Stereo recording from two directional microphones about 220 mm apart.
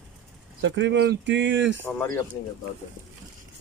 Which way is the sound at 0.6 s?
55° right (ahead or behind).